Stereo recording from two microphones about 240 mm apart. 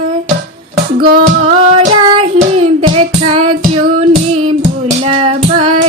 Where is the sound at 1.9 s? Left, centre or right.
Right.